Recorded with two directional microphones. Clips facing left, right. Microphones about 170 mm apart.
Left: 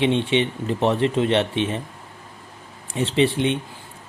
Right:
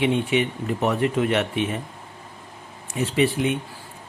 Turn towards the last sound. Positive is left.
turn(degrees=25)  # may be behind; listen again after turning